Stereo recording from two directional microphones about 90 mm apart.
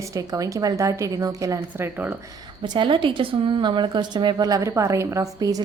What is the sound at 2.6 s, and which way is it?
A woman's voice, 65° right (ahead or behind).